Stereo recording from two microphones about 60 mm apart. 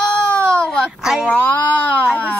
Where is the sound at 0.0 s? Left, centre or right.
Left.